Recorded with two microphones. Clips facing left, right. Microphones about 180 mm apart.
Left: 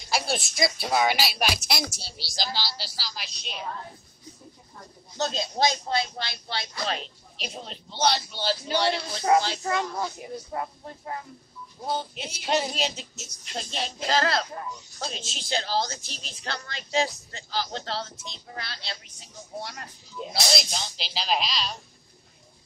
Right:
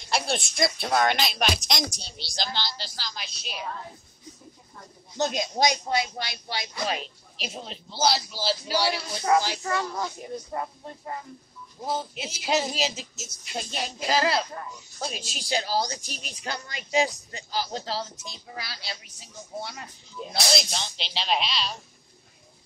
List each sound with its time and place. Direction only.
0.0 s a woman's voice: centre (ahead or behind)
5.1 s a woman's voice: 15° right (ahead or behind)
9.6 s speech: 20° left (ahead or behind)
10.3 s a woman's voice: centre (ahead or behind)